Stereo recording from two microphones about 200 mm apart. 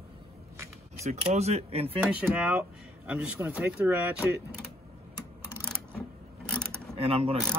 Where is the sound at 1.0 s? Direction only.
30° right (ahead or behind).